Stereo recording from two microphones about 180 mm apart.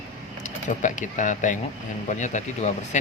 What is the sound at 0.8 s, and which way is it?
Speech, 45° left (ahead or behind).